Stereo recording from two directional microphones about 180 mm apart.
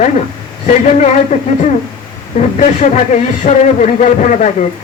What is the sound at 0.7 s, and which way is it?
A man's voice, 40° left (ahead or behind).